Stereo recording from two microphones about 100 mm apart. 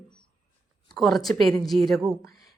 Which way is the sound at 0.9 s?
Centre (ahead or behind).